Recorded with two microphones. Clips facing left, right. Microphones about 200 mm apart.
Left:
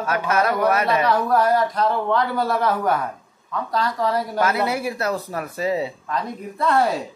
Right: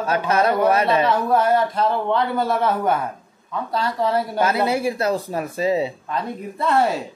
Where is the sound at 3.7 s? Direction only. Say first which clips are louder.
Right 1 dB; 30° right (ahead or behind).